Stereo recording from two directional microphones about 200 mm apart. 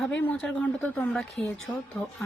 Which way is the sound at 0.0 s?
5° left (ahead or behind).